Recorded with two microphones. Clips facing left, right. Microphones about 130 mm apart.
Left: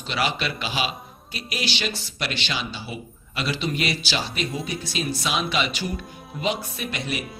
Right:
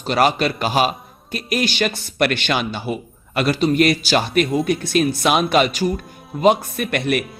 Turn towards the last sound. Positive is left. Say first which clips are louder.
# right 9 dB
turn(degrees=-60)  # may be behind; listen again after turning